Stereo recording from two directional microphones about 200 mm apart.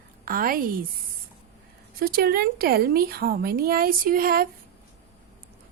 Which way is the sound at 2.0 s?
50° right (ahead or behind).